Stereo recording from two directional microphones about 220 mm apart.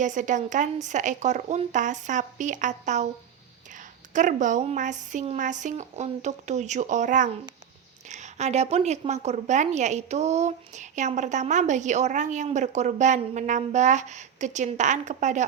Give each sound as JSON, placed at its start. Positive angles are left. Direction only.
{"t": 0.0, "sound": "a woman's voice", "side_deg": -35}
{"t": 4.1, "sound": "a woman's voice", "side_deg": -35}